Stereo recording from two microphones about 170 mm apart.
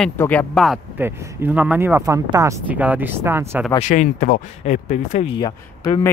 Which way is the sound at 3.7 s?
45° left (ahead or behind).